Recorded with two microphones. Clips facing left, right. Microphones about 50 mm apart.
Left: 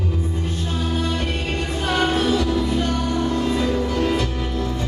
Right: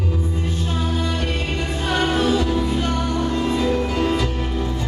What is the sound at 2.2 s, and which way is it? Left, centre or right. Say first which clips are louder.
Music: right 1 dB; right.